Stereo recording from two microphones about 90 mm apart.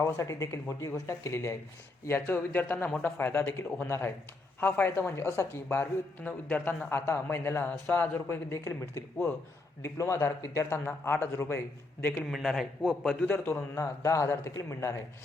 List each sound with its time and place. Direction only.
0.0 s a woman's voice: 35° left (ahead or behind)
12.2 s a man's voice: centre (ahead or behind)
13.2 s a woman's voice: 20° left (ahead or behind)
13.7 s speech: 35° left (ahead or behind)